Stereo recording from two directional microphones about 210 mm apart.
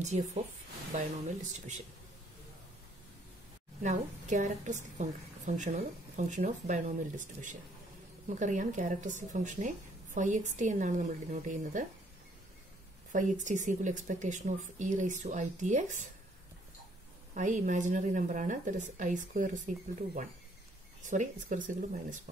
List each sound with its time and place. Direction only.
0.0 s a woman's voice: 35° right (ahead or behind)
3.8 s a woman's voice: 35° right (ahead or behind)
13.1 s a woman's voice: 35° right (ahead or behind)
17.3 s a woman's voice: 35° right (ahead or behind)